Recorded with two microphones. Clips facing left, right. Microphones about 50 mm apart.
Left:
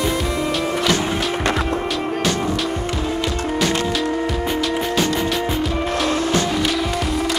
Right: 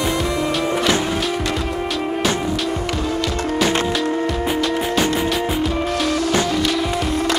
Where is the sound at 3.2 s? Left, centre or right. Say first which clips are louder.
Right 2 dB; centre.